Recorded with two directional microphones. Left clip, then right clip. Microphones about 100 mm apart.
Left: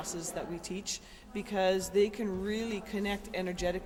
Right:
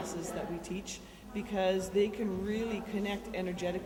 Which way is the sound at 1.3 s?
40° left (ahead or behind).